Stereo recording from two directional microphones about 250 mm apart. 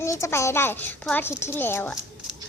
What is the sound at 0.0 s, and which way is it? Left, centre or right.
Speech, centre.